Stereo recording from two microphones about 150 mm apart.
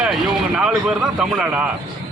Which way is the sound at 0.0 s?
5° right (ahead or behind).